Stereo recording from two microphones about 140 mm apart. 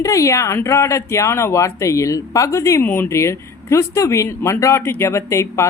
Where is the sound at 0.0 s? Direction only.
20° left (ahead or behind).